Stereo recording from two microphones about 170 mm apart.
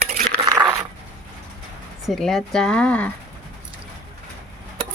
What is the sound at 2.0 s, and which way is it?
Speech, centre (ahead or behind).